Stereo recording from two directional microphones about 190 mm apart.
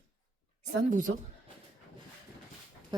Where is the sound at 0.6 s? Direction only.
45° right (ahead or behind).